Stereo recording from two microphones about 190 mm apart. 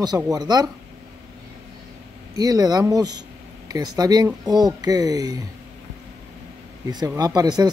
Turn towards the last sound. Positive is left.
turn(degrees=-20)  # may be behind; listen again after turning